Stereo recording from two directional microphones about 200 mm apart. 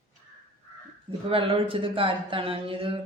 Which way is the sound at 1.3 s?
25° right (ahead or behind).